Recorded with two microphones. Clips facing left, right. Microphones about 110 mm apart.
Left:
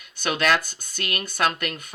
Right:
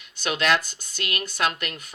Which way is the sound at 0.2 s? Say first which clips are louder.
Left 1 dB; 50° left (ahead or behind).